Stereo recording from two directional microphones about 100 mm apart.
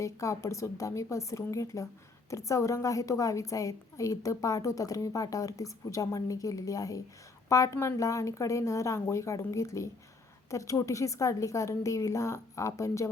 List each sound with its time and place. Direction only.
0.0 s a woman's voice: 30° left (ahead or behind)